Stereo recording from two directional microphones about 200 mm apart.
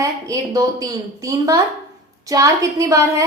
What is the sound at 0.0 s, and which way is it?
A woman's voice, 15° right (ahead or behind).